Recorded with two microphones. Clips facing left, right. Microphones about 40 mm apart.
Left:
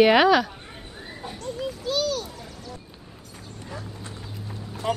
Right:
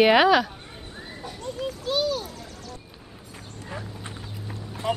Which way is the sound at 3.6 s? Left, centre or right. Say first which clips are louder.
Right 1 dB; right.